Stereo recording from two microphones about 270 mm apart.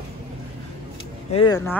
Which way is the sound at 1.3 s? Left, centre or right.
Centre.